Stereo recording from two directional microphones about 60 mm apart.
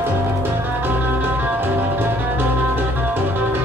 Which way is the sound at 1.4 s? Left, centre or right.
Right.